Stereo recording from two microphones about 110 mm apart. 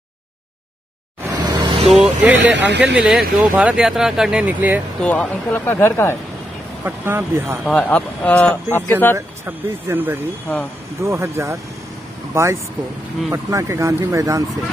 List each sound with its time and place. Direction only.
1.3 s vehicle: 40° right (ahead or behind)
1.9 s vehicle: centre (ahead or behind)
2.2 s speech: 15° right (ahead or behind)
3.0 s speech: 5° right (ahead or behind)
5.0 s speech: 10° left (ahead or behind)
6.8 s speech: 25° right (ahead or behind)
7.7 s speech: 15° left (ahead or behind)
9.1 s speech: 20° right (ahead or behind)